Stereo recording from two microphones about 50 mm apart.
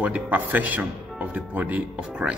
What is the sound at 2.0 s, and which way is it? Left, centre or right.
Speech, centre.